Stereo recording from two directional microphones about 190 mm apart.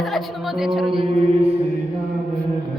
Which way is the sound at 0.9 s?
25° right (ahead or behind).